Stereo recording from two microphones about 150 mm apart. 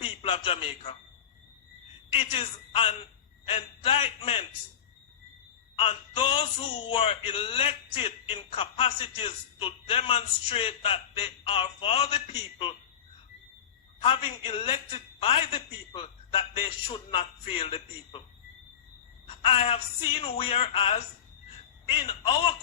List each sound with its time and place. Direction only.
0.0 s a man's voice: 35° left (ahead or behind)
2.1 s speech: 40° left (ahead or behind)
5.7 s speech: 40° left (ahead or behind)
14.0 s speech: 40° left (ahead or behind)
19.5 s speech: 40° left (ahead or behind)